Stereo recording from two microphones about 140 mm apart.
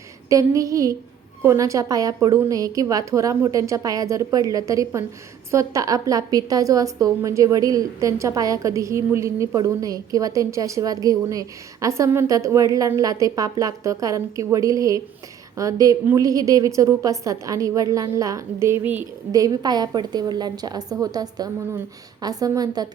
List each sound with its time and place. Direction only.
0.3 s a woman's voice: 25° right (ahead or behind)
19.3 s a woman's voice: 25° right (ahead or behind)